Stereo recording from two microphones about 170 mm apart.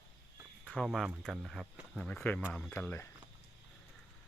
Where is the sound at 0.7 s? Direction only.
Centre (ahead or behind).